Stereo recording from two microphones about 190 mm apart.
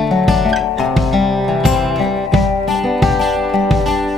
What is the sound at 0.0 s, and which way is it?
Music, centre (ahead or behind).